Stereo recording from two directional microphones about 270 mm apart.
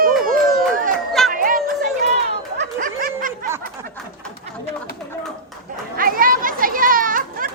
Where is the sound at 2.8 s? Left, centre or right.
Right.